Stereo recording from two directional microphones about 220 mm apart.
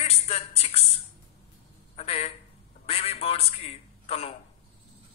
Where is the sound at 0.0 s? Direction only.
25° left (ahead or behind).